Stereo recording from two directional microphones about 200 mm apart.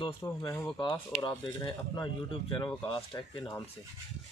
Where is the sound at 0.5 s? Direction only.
10° left (ahead or behind).